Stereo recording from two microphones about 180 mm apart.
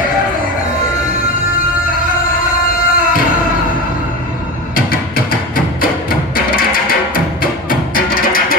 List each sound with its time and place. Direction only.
2.9 s music: 50° left (ahead or behind)
4.7 s a sound: 55° left (ahead or behind)
7.9 s music: 55° left (ahead or behind)